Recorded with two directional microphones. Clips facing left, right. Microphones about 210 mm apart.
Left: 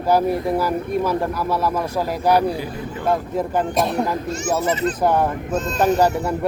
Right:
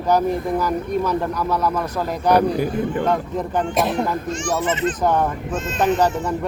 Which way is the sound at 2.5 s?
50° right (ahead or behind).